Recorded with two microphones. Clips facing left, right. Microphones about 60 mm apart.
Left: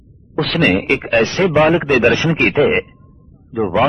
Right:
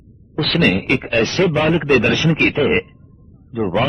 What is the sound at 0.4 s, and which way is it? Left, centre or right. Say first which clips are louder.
A man's voice: left 1 dB; centre.